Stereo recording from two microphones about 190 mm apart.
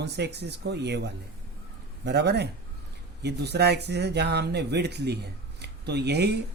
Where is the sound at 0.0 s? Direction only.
60° right (ahead or behind).